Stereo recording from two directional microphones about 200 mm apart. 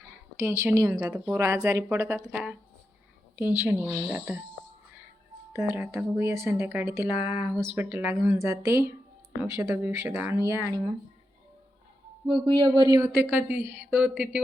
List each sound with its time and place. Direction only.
0.3 s speech: 15° right (ahead or behind)
5.5 s speech: 10° right (ahead or behind)
12.3 s speech: 25° right (ahead or behind); by 14.4 s 5° right (ahead or behind)